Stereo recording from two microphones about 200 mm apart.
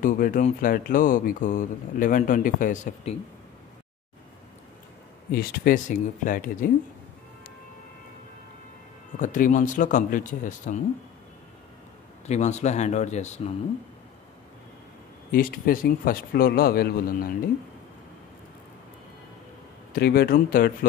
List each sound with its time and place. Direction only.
0.0 s speech: 40° left (ahead or behind)
5.3 s a man's voice: 45° left (ahead or behind)
9.2 s speech: 40° left (ahead or behind)
12.3 s speech: 35° left (ahead or behind)
15.3 s a man's voice: 45° left (ahead or behind)
19.9 s a man's voice: 50° left (ahead or behind)